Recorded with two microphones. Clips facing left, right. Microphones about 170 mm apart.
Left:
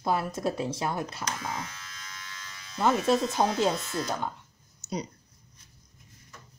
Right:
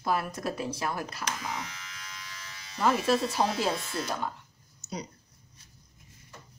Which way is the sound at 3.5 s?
5° right (ahead or behind).